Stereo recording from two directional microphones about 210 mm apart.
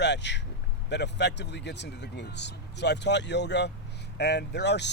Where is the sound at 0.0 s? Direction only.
55° left (ahead or behind).